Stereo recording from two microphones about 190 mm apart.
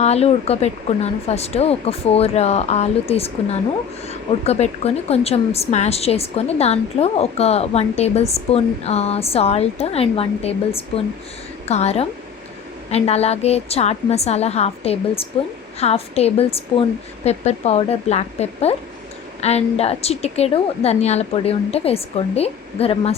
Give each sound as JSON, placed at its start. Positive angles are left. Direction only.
{"t": 0.0, "sound": "a woman's voice", "side_deg": 35}